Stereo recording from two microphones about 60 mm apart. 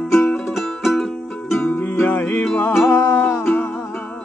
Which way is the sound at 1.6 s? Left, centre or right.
Left.